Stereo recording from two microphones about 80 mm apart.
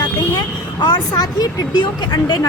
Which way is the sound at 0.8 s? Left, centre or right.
Left.